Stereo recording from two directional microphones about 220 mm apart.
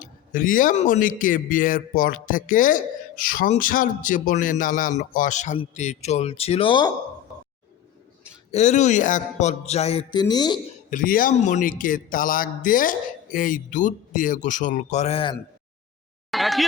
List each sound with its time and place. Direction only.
0.0 s a man's voice: 40° left (ahead or behind); by 6.9 s 20° left (ahead or behind)
8.4 s speech: 30° left (ahead or behind)
10.8 s a man's voice: 40° left (ahead or behind)
16.3 s a sound: centre (ahead or behind)